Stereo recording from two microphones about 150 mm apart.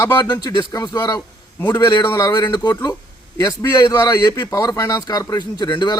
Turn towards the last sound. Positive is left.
turn(degrees=30)  # may be behind; listen again after turning